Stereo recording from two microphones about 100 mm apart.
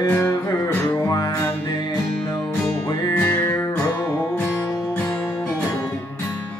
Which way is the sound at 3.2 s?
15° left (ahead or behind).